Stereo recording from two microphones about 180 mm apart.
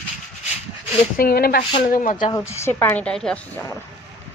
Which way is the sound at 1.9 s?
45° left (ahead or behind).